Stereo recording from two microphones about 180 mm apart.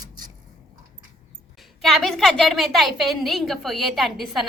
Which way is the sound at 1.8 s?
Centre (ahead or behind).